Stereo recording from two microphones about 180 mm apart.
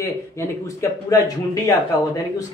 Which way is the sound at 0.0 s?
15° left (ahead or behind).